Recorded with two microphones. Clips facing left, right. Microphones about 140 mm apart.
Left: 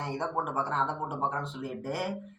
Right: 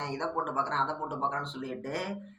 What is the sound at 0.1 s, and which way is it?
Speech, 5° left (ahead or behind).